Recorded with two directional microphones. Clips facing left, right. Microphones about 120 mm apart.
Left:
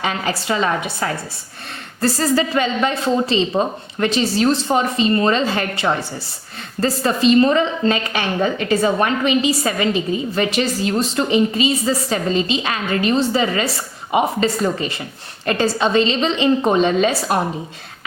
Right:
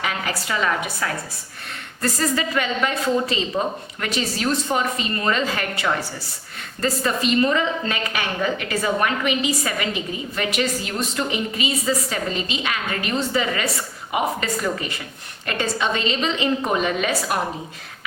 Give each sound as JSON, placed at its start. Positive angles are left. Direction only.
{"t": 0.0, "sound": "a woman's voice", "side_deg": 30}